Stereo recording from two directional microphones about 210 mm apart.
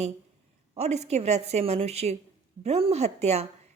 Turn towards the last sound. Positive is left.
turn(degrees=-30)  # may be behind; listen again after turning